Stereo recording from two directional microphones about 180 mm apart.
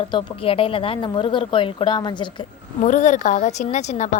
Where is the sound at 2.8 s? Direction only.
45° left (ahead or behind).